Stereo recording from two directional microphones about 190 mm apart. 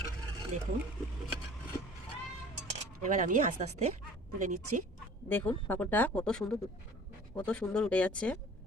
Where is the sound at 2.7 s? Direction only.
40° right (ahead or behind).